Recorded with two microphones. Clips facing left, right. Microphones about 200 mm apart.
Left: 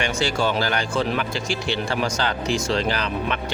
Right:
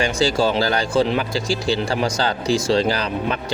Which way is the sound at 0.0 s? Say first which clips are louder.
Right 4 dB; 35° right (ahead or behind).